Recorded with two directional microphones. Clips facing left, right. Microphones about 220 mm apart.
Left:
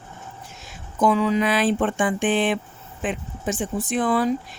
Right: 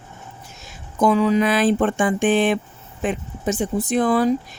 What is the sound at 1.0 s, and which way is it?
Speech, 45° right (ahead or behind).